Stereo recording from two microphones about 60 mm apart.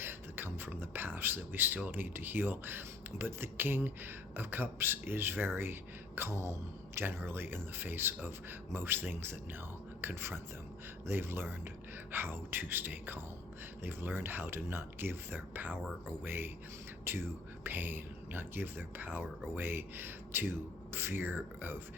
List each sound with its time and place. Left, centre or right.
0.0 s a sound: right
1.9 s a man's voice: right
7.0 s speech: right